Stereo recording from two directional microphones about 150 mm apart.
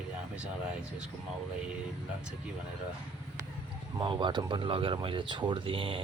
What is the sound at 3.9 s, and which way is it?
Speech, 35° right (ahead or behind).